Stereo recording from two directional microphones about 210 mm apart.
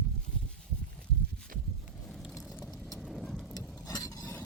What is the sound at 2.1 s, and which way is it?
Vehicle, centre (ahead or behind).